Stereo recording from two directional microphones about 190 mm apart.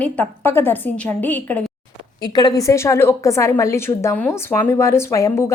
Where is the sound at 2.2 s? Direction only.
20° left (ahead or behind).